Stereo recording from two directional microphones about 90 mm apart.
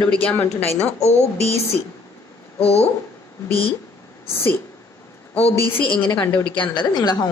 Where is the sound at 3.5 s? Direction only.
90° left.